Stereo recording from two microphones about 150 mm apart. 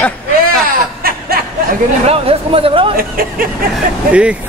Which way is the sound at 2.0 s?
40° right (ahead or behind).